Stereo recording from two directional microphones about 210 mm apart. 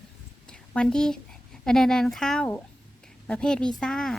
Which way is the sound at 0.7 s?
5° left (ahead or behind).